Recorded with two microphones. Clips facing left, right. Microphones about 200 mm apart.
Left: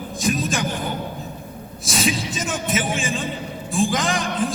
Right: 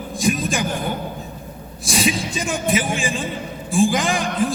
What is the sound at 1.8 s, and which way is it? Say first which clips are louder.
A man's voice: right 2 dB; centre (ahead or behind).